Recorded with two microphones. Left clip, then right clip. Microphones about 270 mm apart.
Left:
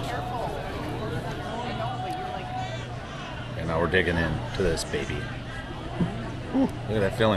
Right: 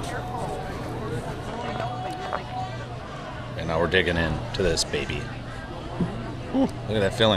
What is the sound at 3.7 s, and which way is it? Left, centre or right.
A man's voice, centre.